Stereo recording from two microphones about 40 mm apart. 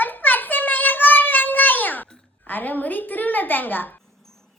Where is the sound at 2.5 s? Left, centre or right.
Left.